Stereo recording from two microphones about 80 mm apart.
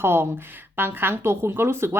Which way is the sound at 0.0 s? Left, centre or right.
Right.